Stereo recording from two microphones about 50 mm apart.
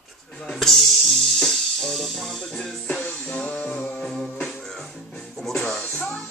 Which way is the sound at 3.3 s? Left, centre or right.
Left.